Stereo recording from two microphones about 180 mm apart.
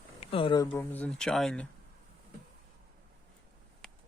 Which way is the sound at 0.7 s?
10° left (ahead or behind).